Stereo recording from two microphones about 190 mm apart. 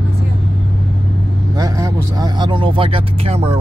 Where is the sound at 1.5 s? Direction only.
20° right (ahead or behind).